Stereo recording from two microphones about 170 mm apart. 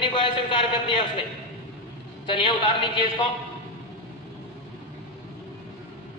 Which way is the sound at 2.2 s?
30° left (ahead or behind).